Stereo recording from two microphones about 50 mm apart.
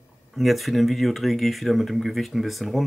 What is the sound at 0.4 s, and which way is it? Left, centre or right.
Speech, centre.